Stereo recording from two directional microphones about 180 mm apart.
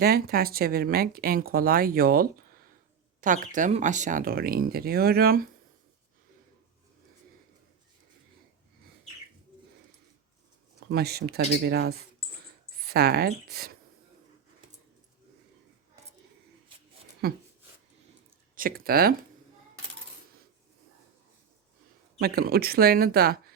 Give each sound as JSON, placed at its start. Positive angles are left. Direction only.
{"t": 0.0, "sound": "speech", "side_deg": -60}
{"t": 10.8, "sound": "speech", "side_deg": -65}
{"t": 17.2, "sound": "speech", "side_deg": -60}
{"t": 18.5, "sound": "speech", "side_deg": -55}
{"t": 22.2, "sound": "speech", "side_deg": -55}